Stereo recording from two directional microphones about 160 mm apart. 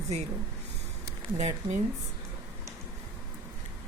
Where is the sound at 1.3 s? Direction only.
45° right (ahead or behind).